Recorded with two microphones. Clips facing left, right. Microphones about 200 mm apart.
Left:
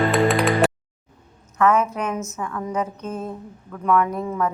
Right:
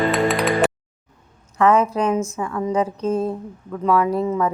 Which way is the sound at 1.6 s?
30° right (ahead or behind).